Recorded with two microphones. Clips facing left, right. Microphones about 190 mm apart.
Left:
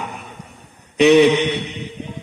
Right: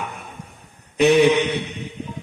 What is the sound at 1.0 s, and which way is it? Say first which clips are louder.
Mantra: left 3 dB; 70° left (ahead or behind).